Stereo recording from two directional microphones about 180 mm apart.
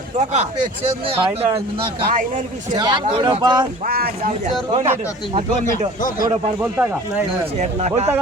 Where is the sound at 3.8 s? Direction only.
55° right (ahead or behind).